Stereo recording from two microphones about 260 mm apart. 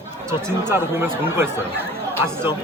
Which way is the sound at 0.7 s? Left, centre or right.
Centre.